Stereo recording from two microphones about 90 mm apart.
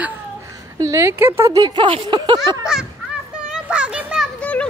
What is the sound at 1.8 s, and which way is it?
Speech, 65° right (ahead or behind).